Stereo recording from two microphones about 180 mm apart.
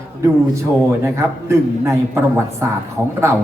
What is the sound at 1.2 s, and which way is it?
Speech, 15° right (ahead or behind).